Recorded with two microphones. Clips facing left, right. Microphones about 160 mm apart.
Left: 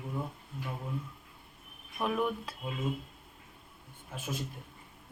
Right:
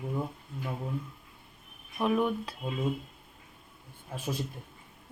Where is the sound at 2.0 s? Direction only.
Centre (ahead or behind).